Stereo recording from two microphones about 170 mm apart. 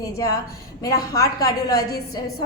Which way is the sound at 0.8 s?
20° left (ahead or behind).